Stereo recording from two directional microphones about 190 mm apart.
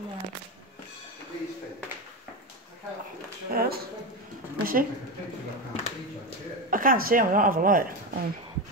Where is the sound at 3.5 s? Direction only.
55° right (ahead or behind).